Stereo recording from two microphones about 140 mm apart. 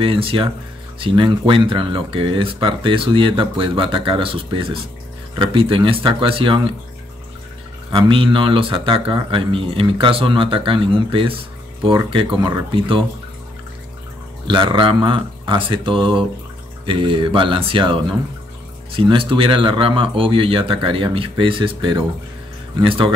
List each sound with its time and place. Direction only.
0.0 s speech: 40° right (ahead or behind)
7.9 s speech: 40° right (ahead or behind)
14.5 s speech: 35° right (ahead or behind)
19.0 s speech: 40° right (ahead or behind)